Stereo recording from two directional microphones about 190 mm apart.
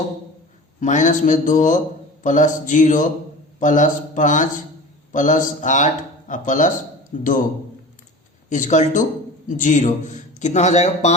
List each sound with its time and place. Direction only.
0.8 s a man's voice: 40° left (ahead or behind)
8.4 s speech: 40° left (ahead or behind)